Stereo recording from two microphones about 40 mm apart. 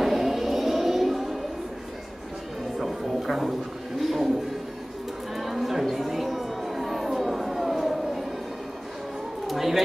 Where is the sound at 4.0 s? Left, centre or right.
Centre.